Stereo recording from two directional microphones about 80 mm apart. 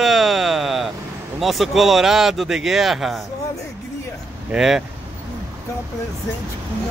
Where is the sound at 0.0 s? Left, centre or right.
Centre.